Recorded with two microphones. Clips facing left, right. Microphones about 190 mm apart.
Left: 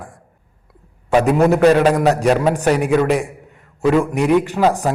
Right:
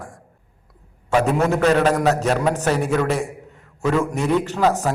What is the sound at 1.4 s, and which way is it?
A man's voice, 15° left (ahead or behind).